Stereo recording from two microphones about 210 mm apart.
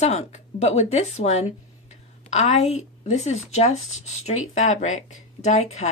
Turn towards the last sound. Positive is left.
turn(degrees=35)  # may be behind; listen again after turning